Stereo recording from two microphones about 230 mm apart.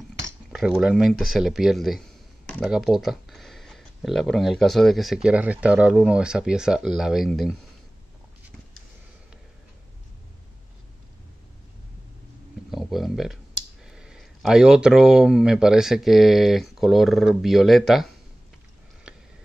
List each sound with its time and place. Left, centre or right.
0.2 s speech: centre
12.7 s speech: centre
19.1 s a sound: centre